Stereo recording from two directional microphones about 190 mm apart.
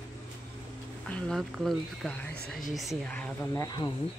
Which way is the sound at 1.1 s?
Centre (ahead or behind).